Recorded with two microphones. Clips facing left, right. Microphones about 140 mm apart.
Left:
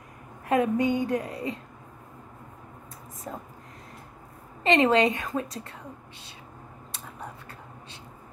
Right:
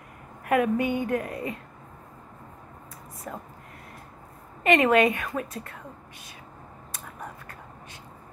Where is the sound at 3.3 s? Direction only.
25° left (ahead or behind).